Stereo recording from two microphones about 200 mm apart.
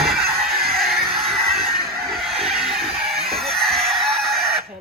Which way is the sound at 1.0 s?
50° right (ahead or behind).